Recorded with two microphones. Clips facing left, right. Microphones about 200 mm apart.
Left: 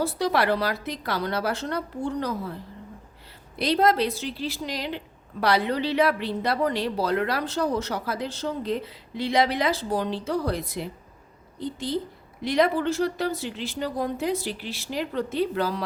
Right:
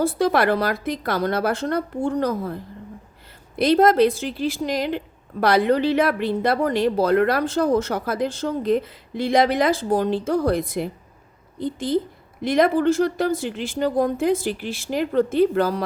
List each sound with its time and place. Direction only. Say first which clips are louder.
0.0 s a woman's voice: right 5 dB; 50° right (ahead or behind)
3.6 s a woman's voice: right 6 dB; 50° right (ahead or behind)